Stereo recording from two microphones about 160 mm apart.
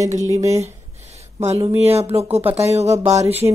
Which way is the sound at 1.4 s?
40° right (ahead or behind).